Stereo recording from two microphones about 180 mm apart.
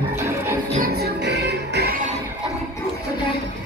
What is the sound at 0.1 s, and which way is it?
Music, 15° right (ahead or behind).